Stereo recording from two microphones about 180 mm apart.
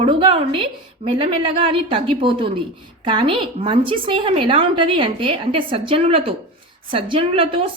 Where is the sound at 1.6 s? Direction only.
30° right (ahead or behind).